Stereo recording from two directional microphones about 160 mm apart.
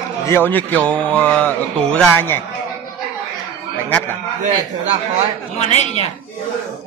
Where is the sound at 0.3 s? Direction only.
10° left (ahead or behind).